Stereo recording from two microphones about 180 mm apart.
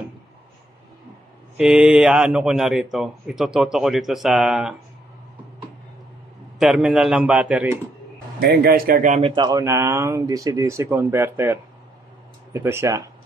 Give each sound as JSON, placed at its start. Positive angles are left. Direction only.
{"t": 1.6, "sound": "speech", "side_deg": -5}
{"t": 6.6, "sound": "speech", "side_deg": -5}
{"t": 8.4, "sound": "speech", "side_deg": -60}
{"t": 9.3, "sound": "speech", "side_deg": -20}
{"t": 12.6, "sound": "speech", "side_deg": -15}